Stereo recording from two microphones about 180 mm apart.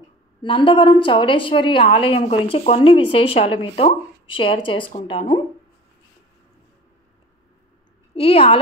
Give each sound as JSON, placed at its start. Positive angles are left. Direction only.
{"t": 0.4, "sound": "a woman's voice", "side_deg": 30}
{"t": 8.1, "sound": "a woman's voice", "side_deg": 35}